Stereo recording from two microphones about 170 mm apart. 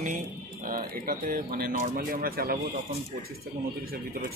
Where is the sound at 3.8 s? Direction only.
65° right (ahead or behind).